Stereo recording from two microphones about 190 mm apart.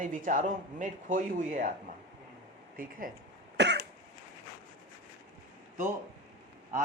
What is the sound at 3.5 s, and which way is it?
Cough, 65° right (ahead or behind).